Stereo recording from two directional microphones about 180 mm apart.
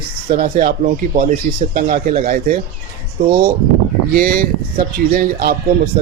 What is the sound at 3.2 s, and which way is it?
Speech, 30° right (ahead or behind).